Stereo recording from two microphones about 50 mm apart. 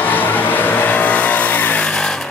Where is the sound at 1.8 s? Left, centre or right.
Centre.